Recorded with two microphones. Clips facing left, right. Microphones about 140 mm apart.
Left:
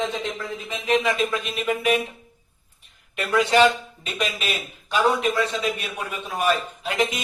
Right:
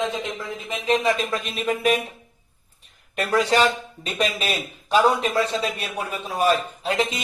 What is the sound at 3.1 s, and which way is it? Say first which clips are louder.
A man's voice: even; 40° right (ahead or behind).